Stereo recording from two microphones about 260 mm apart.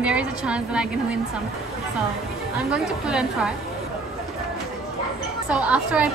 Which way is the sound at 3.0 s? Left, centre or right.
Centre.